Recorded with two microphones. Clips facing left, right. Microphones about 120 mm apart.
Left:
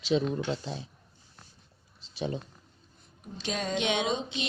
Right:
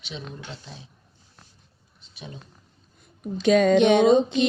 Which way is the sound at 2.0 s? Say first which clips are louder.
Left 9 dB; 30° left (ahead or behind).